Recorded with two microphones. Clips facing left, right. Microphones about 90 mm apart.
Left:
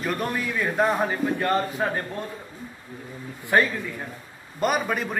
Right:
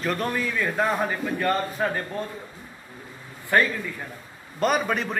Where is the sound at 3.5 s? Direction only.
20° left (ahead or behind).